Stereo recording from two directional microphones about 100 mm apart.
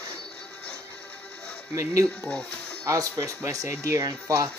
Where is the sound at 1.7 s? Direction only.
30° right (ahead or behind).